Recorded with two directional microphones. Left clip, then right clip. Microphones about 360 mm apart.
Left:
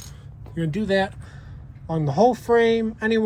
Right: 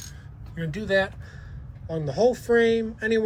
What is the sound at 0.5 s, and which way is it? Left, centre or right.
Speech, left.